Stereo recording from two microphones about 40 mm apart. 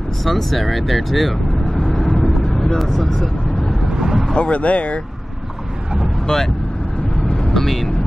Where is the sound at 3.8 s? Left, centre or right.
Centre.